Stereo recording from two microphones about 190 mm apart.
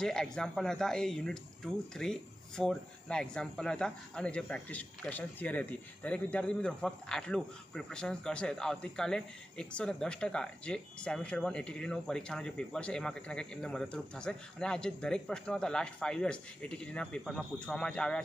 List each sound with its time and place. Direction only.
0.0 s speech: 5° left (ahead or behind)